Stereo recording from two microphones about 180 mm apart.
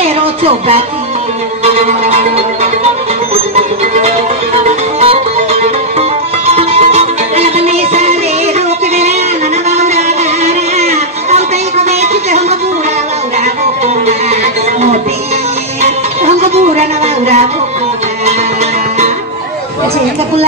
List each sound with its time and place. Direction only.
0.0 s a sound: 30° right (ahead or behind)
1.6 s music: 35° right (ahead or behind)
5.0 s music: 35° right (ahead or behind)
13.8 s music: 35° right (ahead or behind)